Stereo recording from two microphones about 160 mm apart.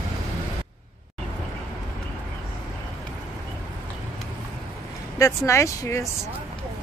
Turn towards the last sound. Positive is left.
turn(degrees=20)  # may be behind; listen again after turning